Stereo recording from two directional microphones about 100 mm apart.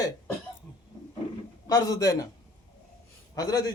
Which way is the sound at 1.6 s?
40° left (ahead or behind).